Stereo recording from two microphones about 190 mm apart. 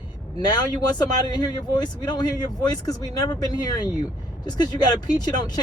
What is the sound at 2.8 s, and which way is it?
Speech, 20° left (ahead or behind).